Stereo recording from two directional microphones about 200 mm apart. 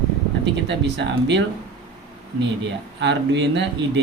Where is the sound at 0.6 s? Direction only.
65° right (ahead or behind).